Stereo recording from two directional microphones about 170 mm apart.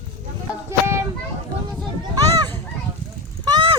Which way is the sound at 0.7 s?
15° right (ahead or behind).